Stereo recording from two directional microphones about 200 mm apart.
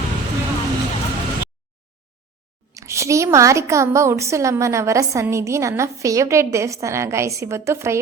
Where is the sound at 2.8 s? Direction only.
15° right (ahead or behind).